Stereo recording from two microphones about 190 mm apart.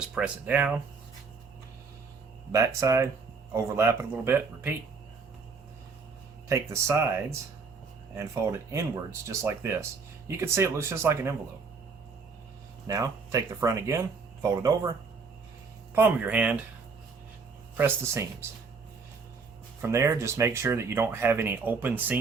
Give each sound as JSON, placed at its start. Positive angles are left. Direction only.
{"t": 0.1, "sound": "speech", "side_deg": -5}
{"t": 2.5, "sound": "speech", "side_deg": -15}
{"t": 6.5, "sound": "speech", "side_deg": -15}
{"t": 8.1, "sound": "speech", "side_deg": -15}
{"t": 12.9, "sound": "speech", "side_deg": -15}
{"t": 16.0, "sound": "speech", "side_deg": -10}
{"t": 17.7, "sound": "speech", "side_deg": -15}
{"t": 19.8, "sound": "speech", "side_deg": -15}